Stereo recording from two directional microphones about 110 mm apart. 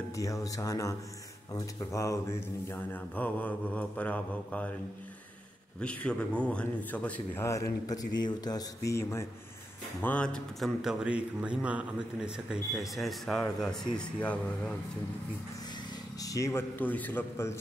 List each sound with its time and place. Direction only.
0.1 s speech: 30° left (ahead or behind)
2.7 s mantra: 15° left (ahead or behind)
5.8 s mantra: 10° left (ahead or behind)
7.4 s speech: 30° left (ahead or behind)
10.0 s mantra: 10° left (ahead or behind)
10.8 s speech: 5° right (ahead or behind)
13.9 s mantra: 10° left (ahead or behind)
16.2 s speech: 30° left (ahead or behind)